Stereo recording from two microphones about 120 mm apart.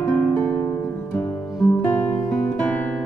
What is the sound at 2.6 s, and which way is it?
Music, 10° left (ahead or behind).